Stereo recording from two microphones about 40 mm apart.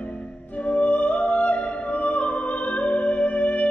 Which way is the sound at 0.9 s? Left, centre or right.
Left.